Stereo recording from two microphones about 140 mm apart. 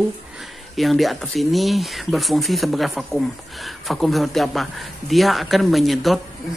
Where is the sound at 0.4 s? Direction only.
Centre (ahead or behind).